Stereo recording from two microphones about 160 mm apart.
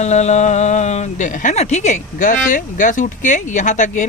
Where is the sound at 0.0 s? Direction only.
45° left (ahead or behind).